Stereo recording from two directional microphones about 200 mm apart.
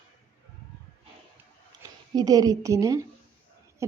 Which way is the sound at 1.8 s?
20° right (ahead or behind).